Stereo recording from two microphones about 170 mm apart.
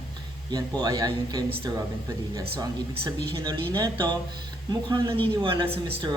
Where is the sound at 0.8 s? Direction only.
20° right (ahead or behind).